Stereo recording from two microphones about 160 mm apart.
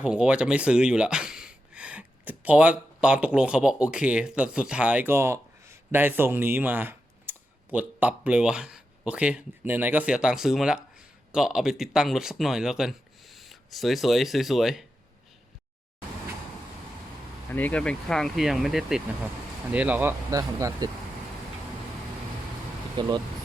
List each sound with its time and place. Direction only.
0.0 s speech: 5° right (ahead or behind)
17.5 s speech: 10° left (ahead or behind); by 20.9 s 20° right (ahead or behind)
23.0 s speech: 25° right (ahead or behind)